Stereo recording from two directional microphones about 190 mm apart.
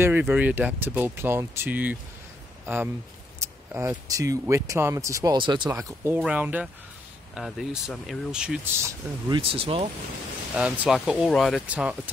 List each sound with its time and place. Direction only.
0.0 s speech: 10° right (ahead or behind)
8.8 s speech: 25° right (ahead or behind)
10.5 s speech: 5° right (ahead or behind)